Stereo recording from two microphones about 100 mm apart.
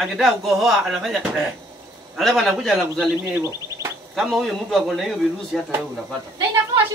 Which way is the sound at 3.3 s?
25° right (ahead or behind).